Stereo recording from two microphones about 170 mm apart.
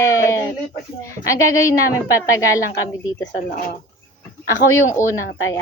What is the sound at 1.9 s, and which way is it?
Speech, 20° left (ahead or behind).